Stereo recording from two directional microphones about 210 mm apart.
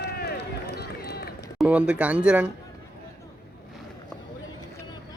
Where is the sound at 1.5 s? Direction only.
5° right (ahead or behind).